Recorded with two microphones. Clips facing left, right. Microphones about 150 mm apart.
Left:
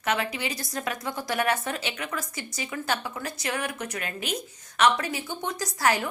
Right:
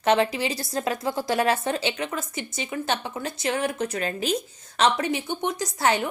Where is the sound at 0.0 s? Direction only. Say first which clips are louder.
Right 7 dB; 30° right (ahead or behind).